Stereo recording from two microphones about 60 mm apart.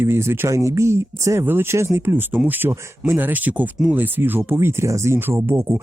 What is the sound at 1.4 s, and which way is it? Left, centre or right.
Speech, right.